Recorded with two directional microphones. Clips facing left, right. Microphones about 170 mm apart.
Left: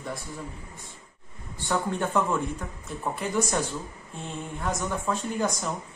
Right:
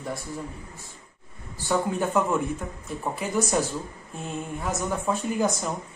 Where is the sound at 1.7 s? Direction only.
5° right (ahead or behind).